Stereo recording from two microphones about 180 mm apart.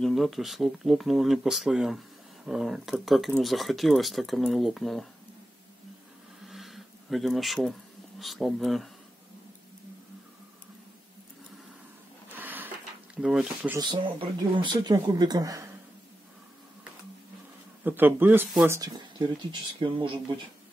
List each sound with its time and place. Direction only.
0.0 s speech: centre (ahead or behind)
6.4 s a sound: centre (ahead or behind)
8.2 s speech: centre (ahead or behind)
12.4 s a sound: 10° right (ahead or behind)
13.1 s speech: 5° right (ahead or behind)
13.7 s speech: 25° right (ahead or behind)
17.8 s speech: 10° right (ahead or behind); by 20.3 s 25° right (ahead or behind)